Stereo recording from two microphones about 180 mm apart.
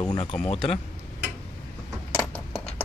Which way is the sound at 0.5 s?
35° left (ahead or behind).